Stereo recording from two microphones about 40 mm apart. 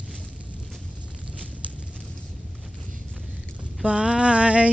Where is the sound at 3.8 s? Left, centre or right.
Right.